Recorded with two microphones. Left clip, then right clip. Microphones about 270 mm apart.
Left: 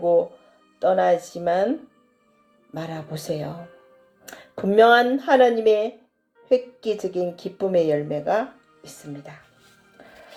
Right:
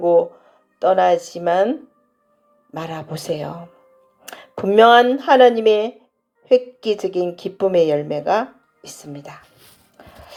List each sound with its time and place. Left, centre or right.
0.0 s a woman's voice: right
2.7 s a woman's voice: right